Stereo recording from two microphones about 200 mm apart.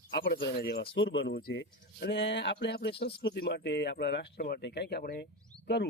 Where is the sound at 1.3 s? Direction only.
50° left (ahead or behind).